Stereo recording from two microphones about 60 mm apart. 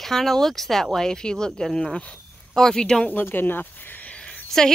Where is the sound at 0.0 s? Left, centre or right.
Centre.